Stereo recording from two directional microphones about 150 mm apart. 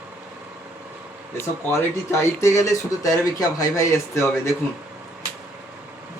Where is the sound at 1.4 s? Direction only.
15° left (ahead or behind).